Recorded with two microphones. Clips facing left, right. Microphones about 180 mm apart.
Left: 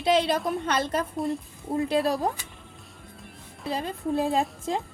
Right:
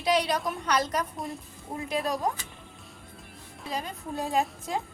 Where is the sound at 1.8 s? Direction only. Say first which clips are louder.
Left 4 dB; 30° left (ahead or behind).